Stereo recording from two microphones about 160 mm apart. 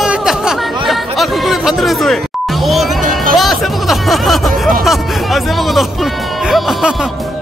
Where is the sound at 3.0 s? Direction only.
55° right (ahead or behind).